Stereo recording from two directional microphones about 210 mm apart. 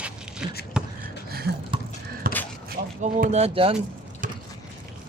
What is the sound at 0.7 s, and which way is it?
Beatboxing, 5° right (ahead or behind).